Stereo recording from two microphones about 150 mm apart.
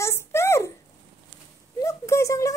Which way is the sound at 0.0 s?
15° left (ahead or behind).